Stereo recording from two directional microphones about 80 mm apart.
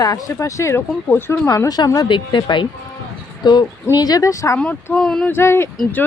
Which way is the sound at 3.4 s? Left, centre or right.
Left.